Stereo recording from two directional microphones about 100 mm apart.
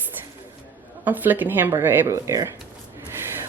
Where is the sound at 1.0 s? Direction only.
20° right (ahead or behind).